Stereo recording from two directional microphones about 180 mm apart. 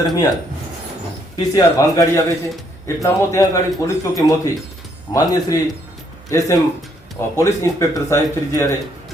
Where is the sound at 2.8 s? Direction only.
15° left (ahead or behind).